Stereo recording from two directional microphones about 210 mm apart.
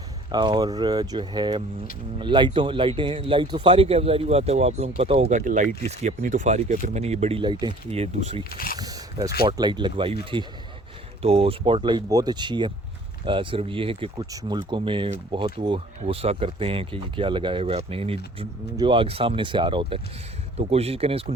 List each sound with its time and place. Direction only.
0.3 s speech: 20° right (ahead or behind)
8.4 s speech: 45° left (ahead or behind)
8.8 s a sound: 20° right (ahead or behind)
9.4 s speech: 20° right (ahead or behind)